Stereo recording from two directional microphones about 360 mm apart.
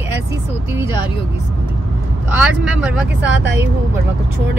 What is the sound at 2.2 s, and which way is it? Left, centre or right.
Speech, centre.